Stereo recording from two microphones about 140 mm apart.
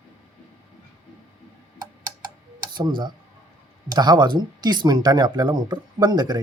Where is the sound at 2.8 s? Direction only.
35° right (ahead or behind).